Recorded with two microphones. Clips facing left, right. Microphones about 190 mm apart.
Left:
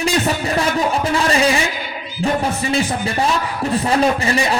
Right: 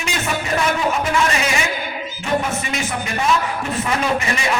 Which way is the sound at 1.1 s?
35° left (ahead or behind).